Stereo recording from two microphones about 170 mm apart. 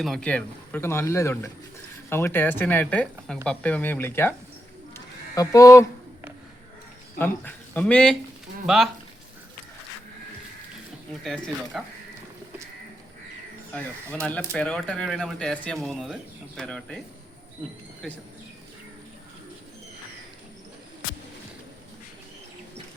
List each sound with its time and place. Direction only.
0.0 s speech: 5° left (ahead or behind)
4.9 s a sound: 20° left (ahead or behind)
7.2 s speech: 10° left (ahead or behind)
11.2 s speech: centre (ahead or behind)
13.7 s speech: 10° left (ahead or behind)
18.0 s speech: centre (ahead or behind)